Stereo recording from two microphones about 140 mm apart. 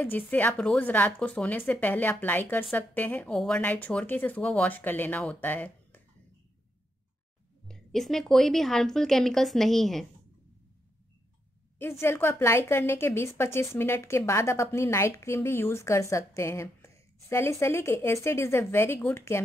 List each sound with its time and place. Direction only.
0.0 s speech: 15° left (ahead or behind)
7.6 s a woman's voice: 5° left (ahead or behind)
11.8 s a woman's voice: 15° left (ahead or behind)